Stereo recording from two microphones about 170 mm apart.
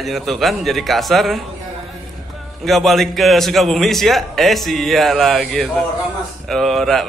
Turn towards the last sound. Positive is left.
turn(degrees=0)  # may be behind; listen again after turning